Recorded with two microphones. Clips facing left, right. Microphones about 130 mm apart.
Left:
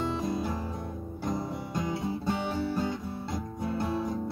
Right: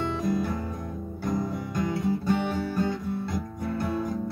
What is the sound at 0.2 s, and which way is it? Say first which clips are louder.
Music: right 4 dB; 25° left (ahead or behind).